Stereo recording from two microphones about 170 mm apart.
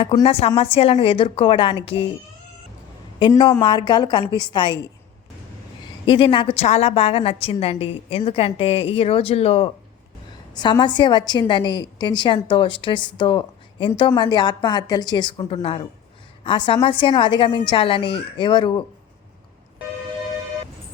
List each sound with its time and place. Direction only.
0.0 s a woman's voice: 30° left (ahead or behind)
3.2 s a woman's voice: 25° left (ahead or behind)
6.1 s a woman's voice: 30° left (ahead or behind)